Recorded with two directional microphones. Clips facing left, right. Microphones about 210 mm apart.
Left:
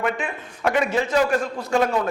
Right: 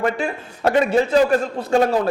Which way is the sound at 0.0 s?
35° right (ahead or behind).